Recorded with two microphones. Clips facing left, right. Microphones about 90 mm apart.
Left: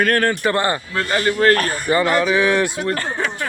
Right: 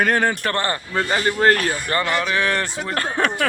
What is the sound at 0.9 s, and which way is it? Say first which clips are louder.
Speech: even; 20° right (ahead or behind).